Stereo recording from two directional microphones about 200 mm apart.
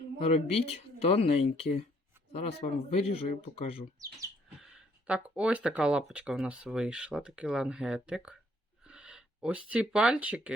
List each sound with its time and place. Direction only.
0.2 s speech: 30° left (ahead or behind)
4.6 s speech: 5° right (ahead or behind)
8.8 s a sound: 5° right (ahead or behind)
9.6 s speech: 5° right (ahead or behind)